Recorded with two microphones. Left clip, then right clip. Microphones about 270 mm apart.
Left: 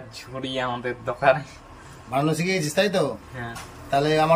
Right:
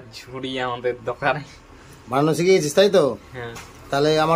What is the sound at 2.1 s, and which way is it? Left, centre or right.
Speech, centre.